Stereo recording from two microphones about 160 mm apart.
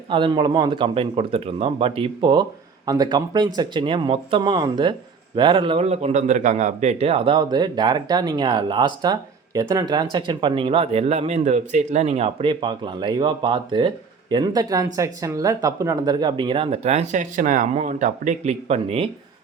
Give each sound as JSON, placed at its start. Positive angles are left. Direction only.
{"t": 0.1, "sound": "speech", "side_deg": -30}